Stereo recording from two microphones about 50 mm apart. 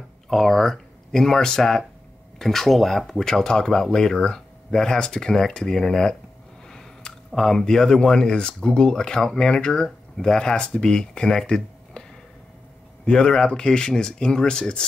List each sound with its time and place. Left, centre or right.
0.3 s speech: centre